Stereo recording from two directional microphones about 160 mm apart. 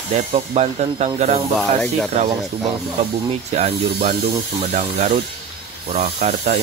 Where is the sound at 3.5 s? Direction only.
45° right (ahead or behind).